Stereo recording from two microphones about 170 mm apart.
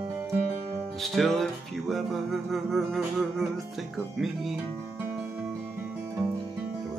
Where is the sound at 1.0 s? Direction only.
Centre (ahead or behind).